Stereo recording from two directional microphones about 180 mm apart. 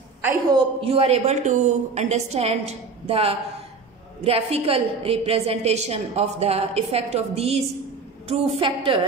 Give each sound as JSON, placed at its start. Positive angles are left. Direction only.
{"t": 0.5, "sound": "a woman's voice", "side_deg": -25}